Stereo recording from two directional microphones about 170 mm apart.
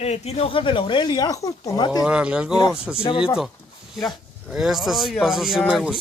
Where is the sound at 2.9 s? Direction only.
30° left (ahead or behind).